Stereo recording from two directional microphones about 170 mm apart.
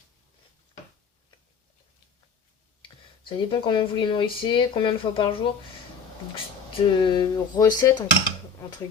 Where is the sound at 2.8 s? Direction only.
30° left (ahead or behind).